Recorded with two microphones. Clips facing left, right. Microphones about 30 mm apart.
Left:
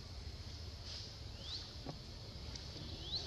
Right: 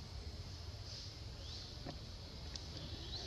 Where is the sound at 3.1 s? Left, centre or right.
Left.